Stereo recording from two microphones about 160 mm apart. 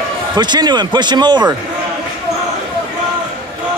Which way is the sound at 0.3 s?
25° right (ahead or behind).